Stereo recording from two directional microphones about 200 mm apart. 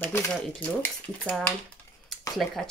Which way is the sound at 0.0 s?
5° left (ahead or behind).